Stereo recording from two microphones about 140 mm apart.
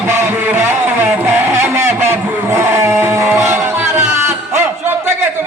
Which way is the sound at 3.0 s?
15° right (ahead or behind).